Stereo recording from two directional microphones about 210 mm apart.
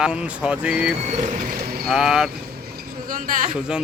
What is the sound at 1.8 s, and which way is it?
Speech, centre (ahead or behind).